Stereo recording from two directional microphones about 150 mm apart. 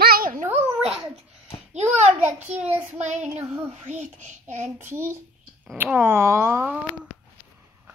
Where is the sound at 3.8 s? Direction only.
55° right (ahead or behind).